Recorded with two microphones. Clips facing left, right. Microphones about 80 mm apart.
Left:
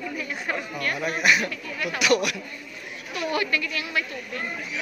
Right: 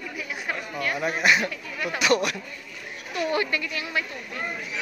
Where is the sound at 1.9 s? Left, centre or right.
Right.